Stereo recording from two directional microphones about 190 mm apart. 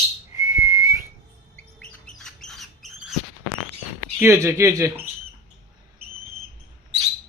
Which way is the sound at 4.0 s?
10° right (ahead or behind).